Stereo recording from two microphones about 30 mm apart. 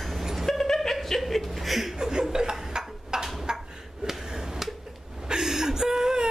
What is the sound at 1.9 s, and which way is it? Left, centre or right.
Chuckle, right.